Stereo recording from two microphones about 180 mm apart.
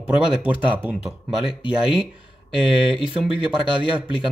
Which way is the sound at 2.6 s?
30° left (ahead or behind).